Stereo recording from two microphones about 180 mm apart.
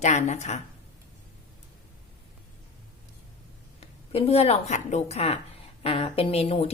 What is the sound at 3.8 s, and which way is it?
A woman's voice, 35° left (ahead or behind).